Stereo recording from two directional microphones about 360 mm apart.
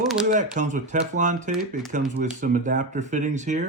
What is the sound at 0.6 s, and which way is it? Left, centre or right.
Speech, centre.